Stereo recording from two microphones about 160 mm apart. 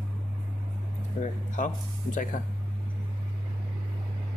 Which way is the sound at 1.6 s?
50° left (ahead or behind).